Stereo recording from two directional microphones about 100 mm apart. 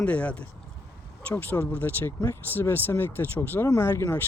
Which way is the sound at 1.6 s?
20° left (ahead or behind).